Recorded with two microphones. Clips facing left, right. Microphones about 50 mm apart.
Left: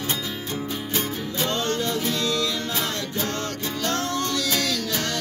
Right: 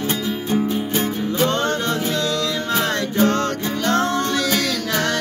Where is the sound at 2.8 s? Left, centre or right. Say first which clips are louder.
Right 9 dB; right.